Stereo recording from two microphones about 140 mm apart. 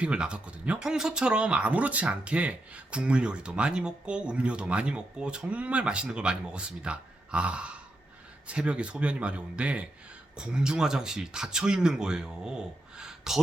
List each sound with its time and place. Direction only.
0.0 s speech: 5° right (ahead or behind)